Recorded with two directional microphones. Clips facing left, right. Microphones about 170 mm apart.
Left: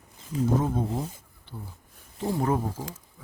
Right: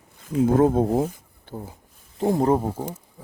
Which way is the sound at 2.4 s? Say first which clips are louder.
Right 5 dB; 35° right (ahead or behind).